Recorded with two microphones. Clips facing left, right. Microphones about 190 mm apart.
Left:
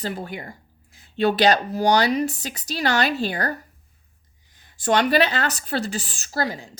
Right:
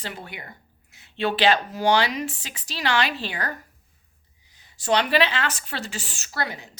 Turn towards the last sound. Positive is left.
turn(degrees=35)  # may be behind; listen again after turning